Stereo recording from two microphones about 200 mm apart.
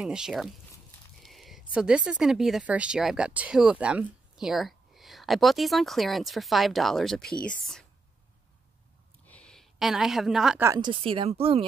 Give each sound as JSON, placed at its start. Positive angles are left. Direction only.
{"t": 0.0, "sound": "speech", "side_deg": -5}
{"t": 9.3, "sound": "a woman's voice", "side_deg": 5}
{"t": 10.7, "sound": "speech", "side_deg": -25}